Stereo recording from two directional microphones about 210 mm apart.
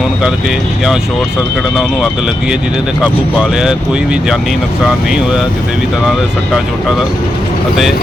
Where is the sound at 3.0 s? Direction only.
5° right (ahead or behind).